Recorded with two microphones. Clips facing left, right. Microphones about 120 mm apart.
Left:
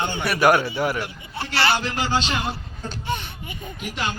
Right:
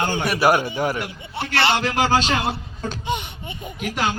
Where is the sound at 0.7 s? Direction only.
40° right (ahead or behind).